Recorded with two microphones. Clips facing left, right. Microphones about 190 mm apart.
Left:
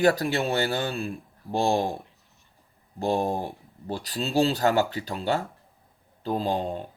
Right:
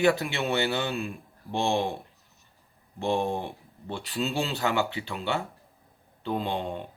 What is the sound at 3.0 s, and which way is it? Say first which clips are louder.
Speech: left 2 dB; 40° left (ahead or behind).